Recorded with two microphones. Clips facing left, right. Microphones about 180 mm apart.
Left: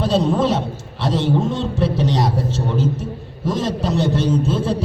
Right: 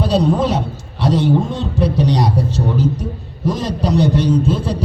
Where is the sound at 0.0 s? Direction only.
Centre (ahead or behind).